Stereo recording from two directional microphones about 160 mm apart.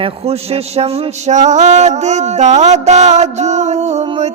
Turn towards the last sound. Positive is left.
turn(degrees=-40)  # may be behind; listen again after turning